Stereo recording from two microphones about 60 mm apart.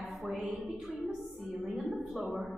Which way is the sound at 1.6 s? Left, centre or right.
Centre.